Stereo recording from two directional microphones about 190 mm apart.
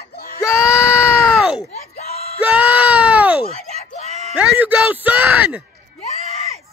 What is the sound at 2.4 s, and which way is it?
Speech, 5° right (ahead or behind).